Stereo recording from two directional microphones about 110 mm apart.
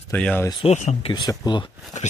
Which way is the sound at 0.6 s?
75° left (ahead or behind).